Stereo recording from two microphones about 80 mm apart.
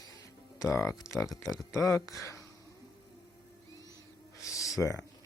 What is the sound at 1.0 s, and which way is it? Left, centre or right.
Speech, left.